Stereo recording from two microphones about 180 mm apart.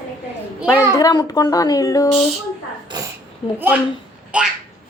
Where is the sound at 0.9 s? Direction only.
20° left (ahead or behind).